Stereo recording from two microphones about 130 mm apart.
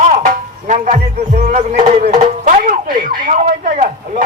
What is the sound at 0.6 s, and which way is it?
Speech, 70° right (ahead or behind).